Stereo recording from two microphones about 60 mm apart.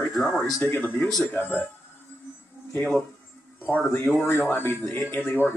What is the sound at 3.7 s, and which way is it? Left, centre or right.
Speech, centre.